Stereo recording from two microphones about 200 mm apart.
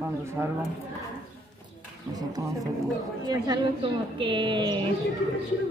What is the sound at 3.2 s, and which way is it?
Speech, 20° right (ahead or behind).